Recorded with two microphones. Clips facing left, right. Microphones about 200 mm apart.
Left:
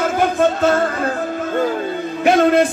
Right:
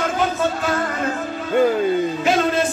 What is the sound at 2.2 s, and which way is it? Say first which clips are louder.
Music: left 6 dB; 60° left (ahead or behind).